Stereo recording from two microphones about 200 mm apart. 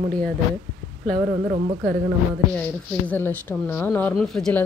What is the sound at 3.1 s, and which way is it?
Speech, 10° left (ahead or behind).